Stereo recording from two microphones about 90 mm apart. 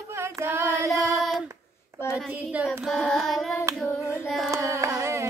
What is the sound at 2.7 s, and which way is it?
Child singing, 5° left (ahead or behind).